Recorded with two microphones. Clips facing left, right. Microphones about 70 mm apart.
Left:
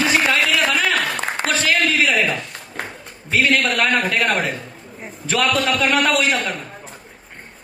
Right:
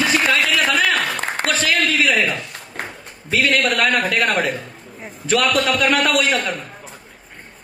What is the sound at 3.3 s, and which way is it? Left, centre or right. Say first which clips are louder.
Speech: even; left.